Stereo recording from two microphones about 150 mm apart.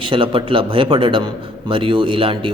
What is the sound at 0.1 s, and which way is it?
A man's voice, 35° right (ahead or behind).